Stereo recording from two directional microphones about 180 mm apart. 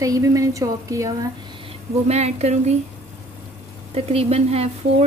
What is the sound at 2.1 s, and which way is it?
Speech, 35° right (ahead or behind).